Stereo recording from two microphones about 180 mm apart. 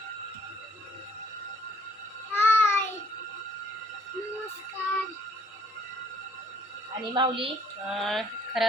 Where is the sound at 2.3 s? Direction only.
10° left (ahead or behind).